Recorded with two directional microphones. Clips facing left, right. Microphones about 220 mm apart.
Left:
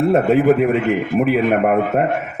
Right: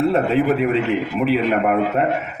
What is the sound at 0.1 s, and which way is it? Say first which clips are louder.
A man's voice: left 4 dB; 45° left (ahead or behind).